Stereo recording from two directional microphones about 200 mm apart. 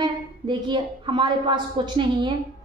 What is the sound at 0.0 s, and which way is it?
A woman's voice, 20° right (ahead or behind).